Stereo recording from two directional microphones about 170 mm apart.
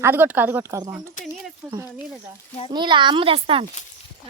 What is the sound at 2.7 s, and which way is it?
Speech, 25° right (ahead or behind).